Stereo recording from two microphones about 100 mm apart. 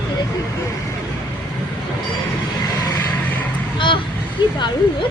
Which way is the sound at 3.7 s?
55° left (ahead or behind).